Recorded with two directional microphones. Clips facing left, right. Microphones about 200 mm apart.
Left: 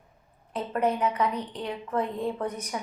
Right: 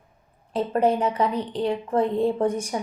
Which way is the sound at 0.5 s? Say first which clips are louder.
Right 6 dB; 30° right (ahead or behind).